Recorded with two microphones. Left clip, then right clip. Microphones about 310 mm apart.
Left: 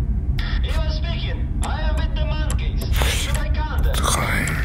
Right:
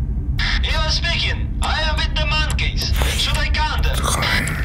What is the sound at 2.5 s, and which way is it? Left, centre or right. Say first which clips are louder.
Music: right 9 dB; right.